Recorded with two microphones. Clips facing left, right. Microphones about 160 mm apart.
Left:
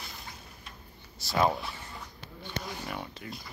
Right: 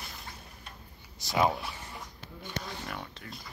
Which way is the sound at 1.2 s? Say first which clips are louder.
Even; 20° right (ahead or behind).